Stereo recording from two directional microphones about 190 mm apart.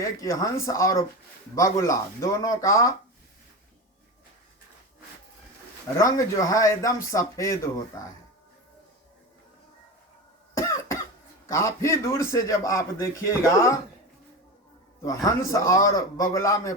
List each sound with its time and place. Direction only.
0.0 s a man's voice: 15° left (ahead or behind)
6.0 s a man's voice: 15° left (ahead or behind)
11.4 s a man's voice: 15° left (ahead or behind)
15.0 s a man's voice: 15° left (ahead or behind)